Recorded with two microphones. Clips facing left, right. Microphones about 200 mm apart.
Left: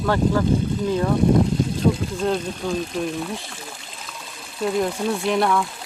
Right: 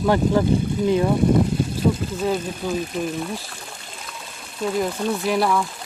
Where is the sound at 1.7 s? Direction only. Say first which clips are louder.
Left 1 dB; 5° right (ahead or behind).